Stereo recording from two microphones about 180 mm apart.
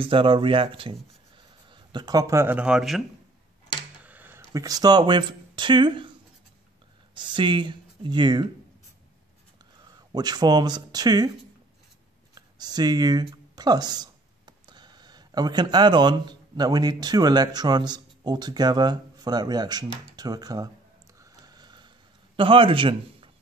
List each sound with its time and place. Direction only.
0.0 s speech: 30° right (ahead or behind); by 3.0 s centre (ahead or behind)
4.0 s speech: 10° right (ahead or behind); by 6.1 s 25° right (ahead or behind)
7.2 s speech: 25° right (ahead or behind)
10.1 s speech: 20° right (ahead or behind)
12.4 s speech: 20° right (ahead or behind)
21.2 s a sound: 20° right (ahead or behind)